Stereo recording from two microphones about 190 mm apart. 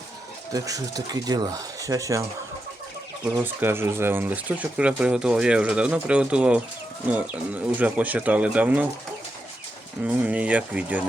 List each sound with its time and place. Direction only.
0.5 s speech: 20° right (ahead or behind)
3.4 s speech: 10° right (ahead or behind)
10.0 s speech: 5° right (ahead or behind)